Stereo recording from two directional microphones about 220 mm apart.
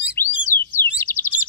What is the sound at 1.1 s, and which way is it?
Chirp, 50° right (ahead or behind).